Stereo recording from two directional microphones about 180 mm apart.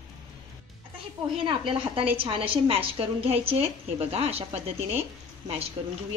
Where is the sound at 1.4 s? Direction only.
30° right (ahead or behind).